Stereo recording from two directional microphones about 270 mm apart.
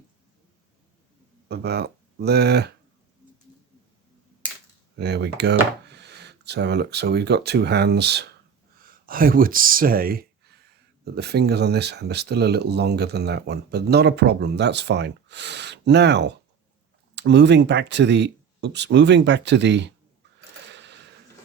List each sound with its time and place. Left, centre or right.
1.5 s speech: right
4.9 s speech: right
20.7 s mechanisms: right